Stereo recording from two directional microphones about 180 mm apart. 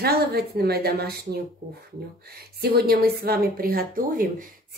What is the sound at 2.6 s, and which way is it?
A woman's voice, 60° right (ahead or behind).